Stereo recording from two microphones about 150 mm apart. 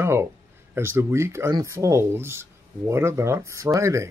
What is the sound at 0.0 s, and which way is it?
Speech, 15° right (ahead or behind).